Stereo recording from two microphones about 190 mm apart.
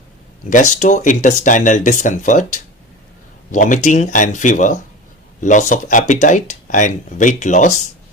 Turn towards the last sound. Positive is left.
turn(degrees=40)  # may be behind; listen again after turning